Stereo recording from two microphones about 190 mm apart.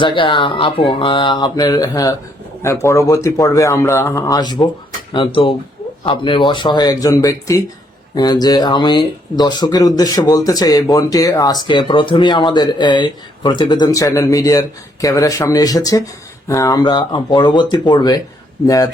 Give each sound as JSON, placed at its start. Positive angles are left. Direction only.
{"t": 0.0, "sound": "speech", "side_deg": 25}